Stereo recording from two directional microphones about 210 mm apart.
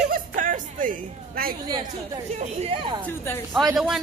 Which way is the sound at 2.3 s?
30° right (ahead or behind).